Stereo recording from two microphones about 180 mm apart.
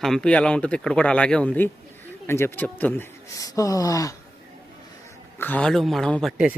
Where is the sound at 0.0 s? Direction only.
5° left (ahead or behind); by 4.1 s 20° left (ahead or behind).